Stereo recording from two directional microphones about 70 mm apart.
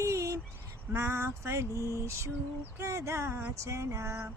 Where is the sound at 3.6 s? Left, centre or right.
Right.